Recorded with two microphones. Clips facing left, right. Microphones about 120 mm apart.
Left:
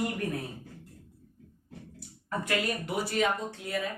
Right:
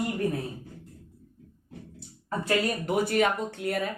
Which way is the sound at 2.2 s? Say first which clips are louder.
Right 4 dB; 30° right (ahead or behind).